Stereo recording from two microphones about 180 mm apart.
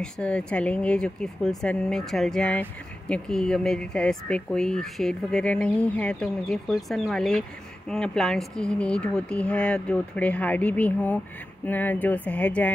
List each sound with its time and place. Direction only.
0.0 s speech: 5° left (ahead or behind)